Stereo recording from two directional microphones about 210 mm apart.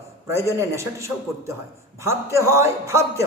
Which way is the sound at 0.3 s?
15° right (ahead or behind).